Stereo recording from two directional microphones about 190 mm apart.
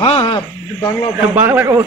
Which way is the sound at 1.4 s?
10° right (ahead or behind).